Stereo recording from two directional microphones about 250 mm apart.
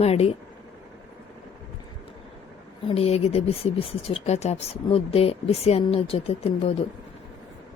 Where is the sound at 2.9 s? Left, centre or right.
Left.